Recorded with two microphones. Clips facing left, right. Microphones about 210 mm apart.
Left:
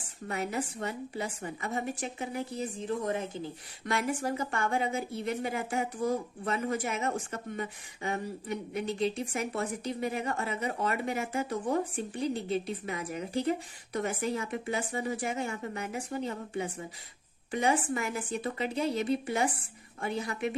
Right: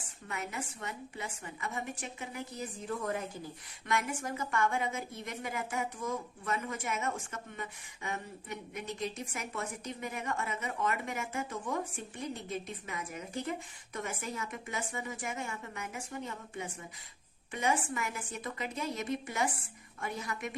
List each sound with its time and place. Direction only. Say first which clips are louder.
0.3 s a woman's voice: left 7 dB; 35° left (ahead or behind)